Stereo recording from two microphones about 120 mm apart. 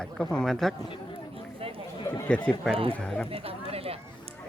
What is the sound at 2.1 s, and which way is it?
Speech, 20° left (ahead or behind).